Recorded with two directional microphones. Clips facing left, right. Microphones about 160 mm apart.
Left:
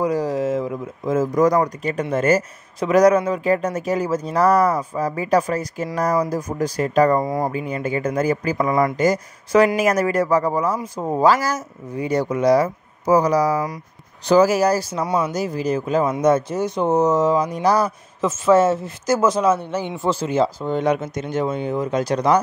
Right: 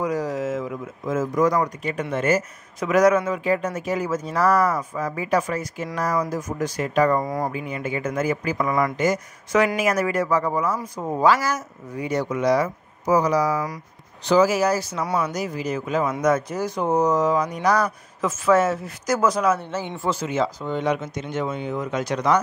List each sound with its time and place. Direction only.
0.0 s speech: 30° left (ahead or behind)
7.2 s speech: 25° left (ahead or behind)
15.0 s speech: 25° left (ahead or behind)
20.1 s speech: 30° left (ahead or behind)